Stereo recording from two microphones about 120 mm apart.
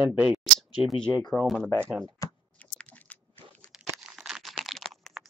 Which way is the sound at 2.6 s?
10° left (ahead or behind).